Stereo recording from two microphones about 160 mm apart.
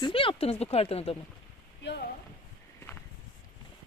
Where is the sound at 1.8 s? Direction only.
90° left.